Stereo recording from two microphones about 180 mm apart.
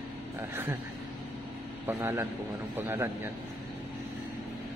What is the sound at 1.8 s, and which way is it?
Speech, 15° right (ahead or behind).